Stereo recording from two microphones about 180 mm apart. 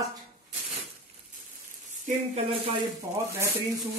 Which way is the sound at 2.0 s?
35° right (ahead or behind).